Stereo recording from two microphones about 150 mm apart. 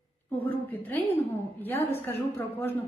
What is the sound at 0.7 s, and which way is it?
A woman's voice, 15° left (ahead or behind).